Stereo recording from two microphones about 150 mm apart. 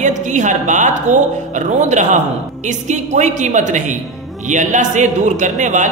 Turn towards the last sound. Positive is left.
turn(degrees=-55)  # may be behind; listen again after turning